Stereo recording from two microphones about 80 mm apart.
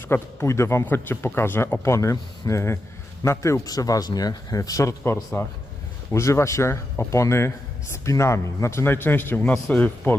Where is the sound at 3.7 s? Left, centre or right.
Left.